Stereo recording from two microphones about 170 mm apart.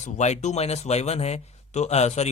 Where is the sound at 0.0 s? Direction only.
45° left (ahead or behind).